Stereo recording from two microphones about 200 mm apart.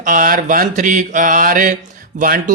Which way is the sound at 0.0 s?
40° right (ahead or behind).